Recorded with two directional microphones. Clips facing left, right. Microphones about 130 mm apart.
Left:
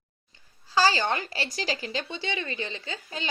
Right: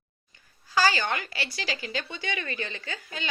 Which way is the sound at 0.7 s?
30° left (ahead or behind).